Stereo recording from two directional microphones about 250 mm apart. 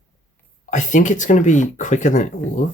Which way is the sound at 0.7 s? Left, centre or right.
Left.